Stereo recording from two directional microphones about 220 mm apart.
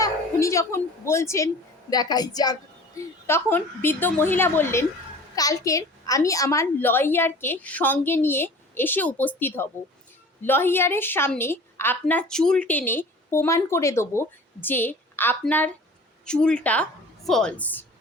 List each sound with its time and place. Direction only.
0.0 s a woman's voice: 15° left (ahead or behind)